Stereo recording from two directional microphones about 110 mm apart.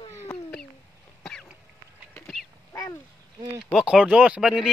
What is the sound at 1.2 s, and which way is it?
Cough, 5° left (ahead or behind).